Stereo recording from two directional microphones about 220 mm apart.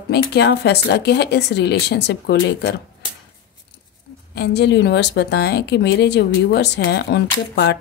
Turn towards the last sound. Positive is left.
turn(degrees=50)  # may be behind; listen again after turning